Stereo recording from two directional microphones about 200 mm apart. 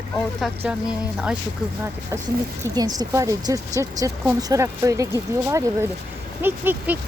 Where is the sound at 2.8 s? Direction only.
20° right (ahead or behind).